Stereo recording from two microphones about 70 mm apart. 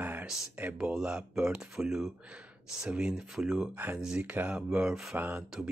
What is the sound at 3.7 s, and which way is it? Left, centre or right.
Speech, right.